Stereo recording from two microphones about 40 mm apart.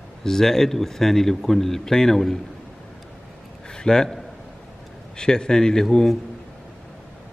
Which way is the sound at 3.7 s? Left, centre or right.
Centre.